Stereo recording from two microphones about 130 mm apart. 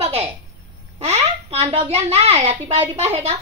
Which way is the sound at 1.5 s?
50° right (ahead or behind).